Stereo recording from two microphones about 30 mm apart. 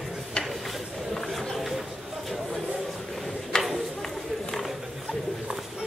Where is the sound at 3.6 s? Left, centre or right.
Centre.